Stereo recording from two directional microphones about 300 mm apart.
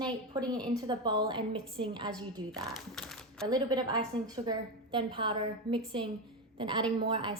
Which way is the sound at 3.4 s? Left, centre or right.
Centre.